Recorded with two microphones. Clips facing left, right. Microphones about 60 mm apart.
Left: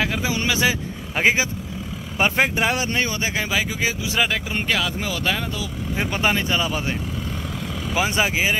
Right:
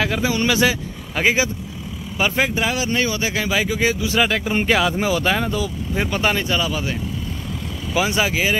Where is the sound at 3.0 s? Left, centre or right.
Left.